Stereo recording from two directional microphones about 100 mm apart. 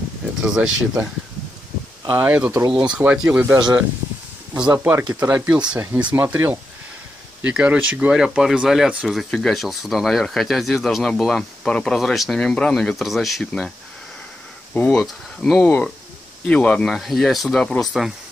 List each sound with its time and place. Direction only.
0.5 s speech: 10° right (ahead or behind)
2.1 s speech: 15° right (ahead or behind)
2.7 s speech: 50° right (ahead or behind)
3.0 s speech: 15° right (ahead or behind)
3.5 s speech: 45° right (ahead or behind)
4.7 s speech: 20° right (ahead or behind); by 13.7 s centre (ahead or behind)
14.7 s speech: 10° left (ahead or behind)